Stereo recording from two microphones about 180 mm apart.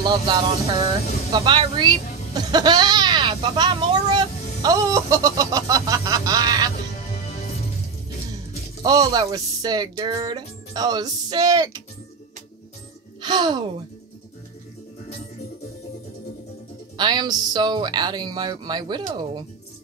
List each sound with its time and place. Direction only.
0.0 s speech: 25° right (ahead or behind)
8.8 s speech: 20° right (ahead or behind)
13.2 s speech: 25° right (ahead or behind)
16.9 s speech: 25° right (ahead or behind)